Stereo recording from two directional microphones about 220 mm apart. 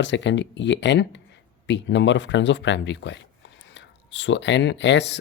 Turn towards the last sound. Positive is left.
turn(degrees=55)  # may be behind; listen again after turning